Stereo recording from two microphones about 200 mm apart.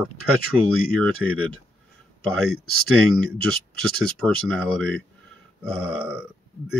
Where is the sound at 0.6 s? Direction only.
90° right.